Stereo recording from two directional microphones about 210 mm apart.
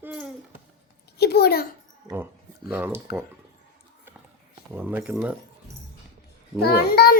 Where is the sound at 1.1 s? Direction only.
50° left (ahead or behind).